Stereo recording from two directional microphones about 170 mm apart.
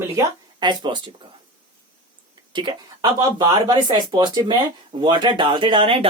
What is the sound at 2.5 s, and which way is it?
Speech, 25° right (ahead or behind).